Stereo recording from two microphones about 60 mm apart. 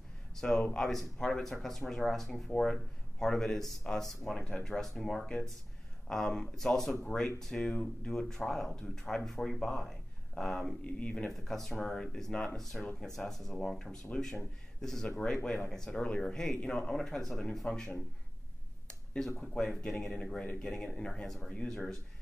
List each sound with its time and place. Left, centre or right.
0.4 s speech: centre
10.8 s speech: left
11.2 s speech: centre
18.9 s a sound: centre
19.4 s speech: centre